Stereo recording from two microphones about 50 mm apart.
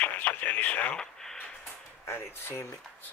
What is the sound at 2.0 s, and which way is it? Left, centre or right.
Speech, left.